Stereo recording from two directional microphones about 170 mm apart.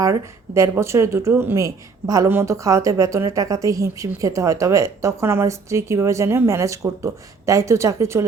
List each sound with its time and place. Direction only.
0.0 s speech: 20° right (ahead or behind)